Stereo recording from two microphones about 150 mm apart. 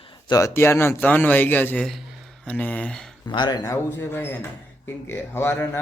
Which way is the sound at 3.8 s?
15° left (ahead or behind).